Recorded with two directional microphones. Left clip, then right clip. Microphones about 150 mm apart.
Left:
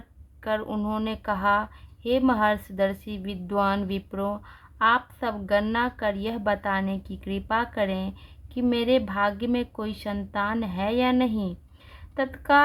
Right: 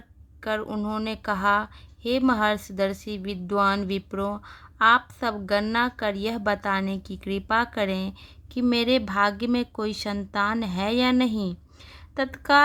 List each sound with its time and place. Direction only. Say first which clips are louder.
0.4 s a woman's voice: even; 25° right (ahead or behind)